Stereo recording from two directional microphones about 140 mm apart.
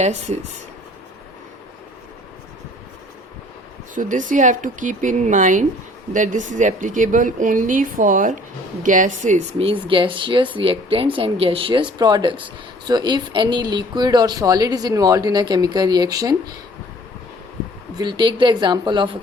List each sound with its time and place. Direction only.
0.0 s speech: 55° right (ahead or behind)
3.9 s a woman's voice: 70° right (ahead or behind)
9.6 s speech: 40° right (ahead or behind)
17.9 s speech: 35° right (ahead or behind)